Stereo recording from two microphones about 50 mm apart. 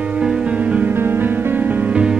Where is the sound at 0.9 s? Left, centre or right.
Right.